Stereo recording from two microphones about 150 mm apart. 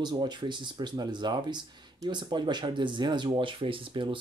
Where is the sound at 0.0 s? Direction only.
30° right (ahead or behind).